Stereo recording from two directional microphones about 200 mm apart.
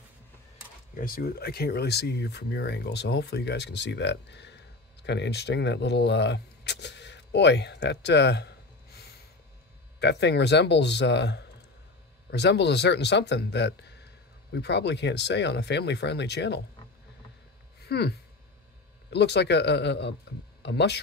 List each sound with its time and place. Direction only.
0.9 s speech: 45° left (ahead or behind)
9.9 s speech: 55° left (ahead or behind)
17.8 s speech: 55° left (ahead or behind)